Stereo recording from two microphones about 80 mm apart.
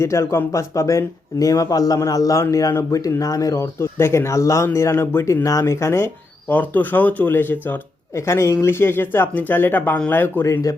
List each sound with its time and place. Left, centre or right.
0.0 s speech: left
6.5 s speech: left
8.1 s speech: left
10.4 s speech: left